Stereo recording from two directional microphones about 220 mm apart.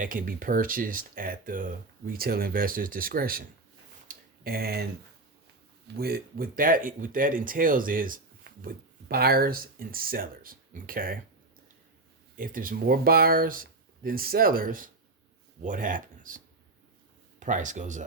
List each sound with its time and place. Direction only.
0.0 s speech: 40° right (ahead or behind)
4.1 s tick-tock: 40° right (ahead or behind)
6.0 s speech: 45° right (ahead or behind)
12.4 s speech: 40° right (ahead or behind)
17.4 s speech: 35° right (ahead or behind)